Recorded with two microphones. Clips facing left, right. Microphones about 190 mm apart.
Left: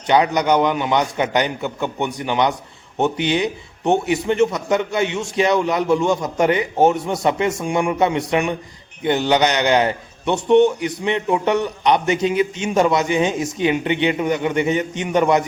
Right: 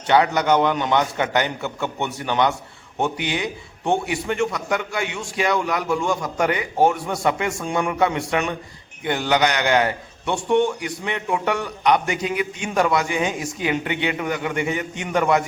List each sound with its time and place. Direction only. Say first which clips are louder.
0.1 s a man's voice: left 1 dB; 15° left (ahead or behind)